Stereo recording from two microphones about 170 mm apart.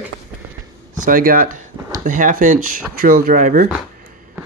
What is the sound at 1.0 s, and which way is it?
Speech, 55° right (ahead or behind).